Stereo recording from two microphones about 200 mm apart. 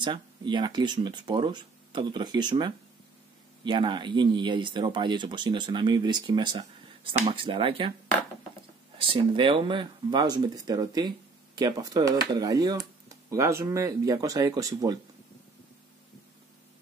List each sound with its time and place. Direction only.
0.0 s speech: 25° right (ahead or behind)
9.0 s speech: 25° right (ahead or behind)